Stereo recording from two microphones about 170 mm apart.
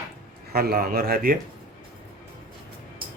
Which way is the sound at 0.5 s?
65° right (ahead or behind).